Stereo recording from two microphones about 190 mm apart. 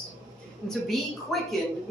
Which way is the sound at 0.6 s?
Centre (ahead or behind).